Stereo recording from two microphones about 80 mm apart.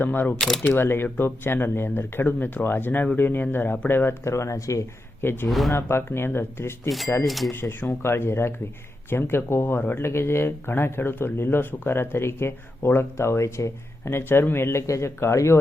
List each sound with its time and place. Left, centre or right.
0.0 s speech: left
0.3 s speech: centre
0.6 s speech: left
1.0 s speech: centre; by 4.8 s left
5.2 s speech: left
5.5 s speech: centre
5.7 s speech: left
7.3 s speech: centre
7.5 s speech: left